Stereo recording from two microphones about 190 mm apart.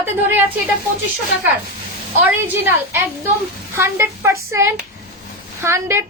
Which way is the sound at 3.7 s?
10° right (ahead or behind).